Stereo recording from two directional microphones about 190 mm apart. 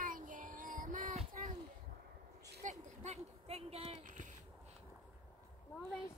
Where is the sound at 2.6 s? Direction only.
40° right (ahead or behind).